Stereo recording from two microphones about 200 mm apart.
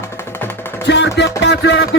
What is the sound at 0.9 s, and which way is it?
Music, 60° left (ahead or behind).